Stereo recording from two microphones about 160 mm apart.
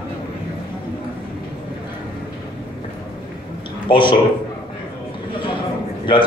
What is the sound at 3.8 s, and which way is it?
Speech, 30° left (ahead or behind).